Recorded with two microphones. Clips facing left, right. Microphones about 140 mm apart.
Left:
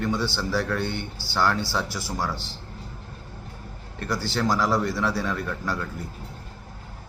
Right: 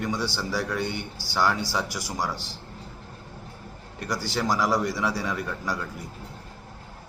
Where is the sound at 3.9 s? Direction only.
10° right (ahead or behind).